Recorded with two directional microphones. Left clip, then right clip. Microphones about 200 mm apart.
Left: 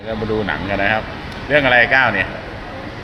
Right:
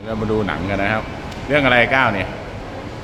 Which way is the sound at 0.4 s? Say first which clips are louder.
Left 2 dB; 25° right (ahead or behind).